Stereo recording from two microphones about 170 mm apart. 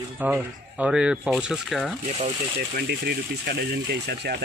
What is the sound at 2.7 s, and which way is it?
Speech, 75° right (ahead or behind).